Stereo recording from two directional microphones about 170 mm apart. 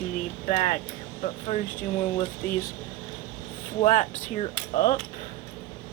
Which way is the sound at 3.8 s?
45° left (ahead or behind).